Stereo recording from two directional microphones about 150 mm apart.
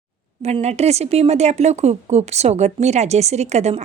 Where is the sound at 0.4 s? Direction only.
45° right (ahead or behind).